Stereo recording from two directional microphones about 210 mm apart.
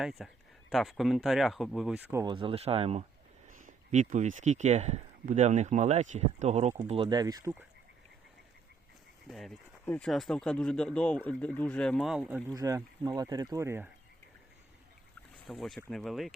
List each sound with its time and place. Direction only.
0.0 s speech: centre (ahead or behind)
2.2 s speech: 25° right (ahead or behind)
9.2 s speech: centre (ahead or behind)
12.5 s speech: 15° right (ahead or behind)
15.4 s speech: centre (ahead or behind)